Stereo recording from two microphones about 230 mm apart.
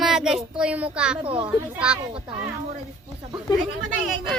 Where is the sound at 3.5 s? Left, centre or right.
Centre.